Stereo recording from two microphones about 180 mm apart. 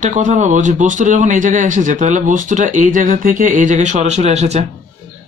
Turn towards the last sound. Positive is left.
turn(degrees=-35)  # may be behind; listen again after turning